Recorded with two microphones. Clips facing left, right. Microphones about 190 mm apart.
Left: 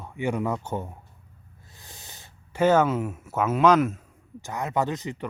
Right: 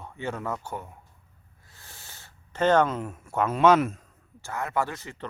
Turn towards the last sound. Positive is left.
turn(degrees=15)  # may be behind; listen again after turning